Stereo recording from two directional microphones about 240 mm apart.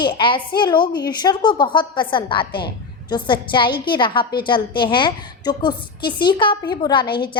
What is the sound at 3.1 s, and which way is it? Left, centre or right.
A woman's voice, centre.